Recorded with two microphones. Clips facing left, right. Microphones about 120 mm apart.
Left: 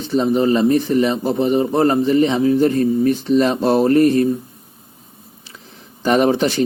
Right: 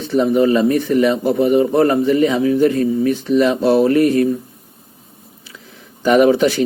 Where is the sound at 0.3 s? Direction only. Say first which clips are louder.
Even; 30° left (ahead or behind).